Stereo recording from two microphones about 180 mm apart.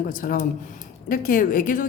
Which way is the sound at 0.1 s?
50° left (ahead or behind).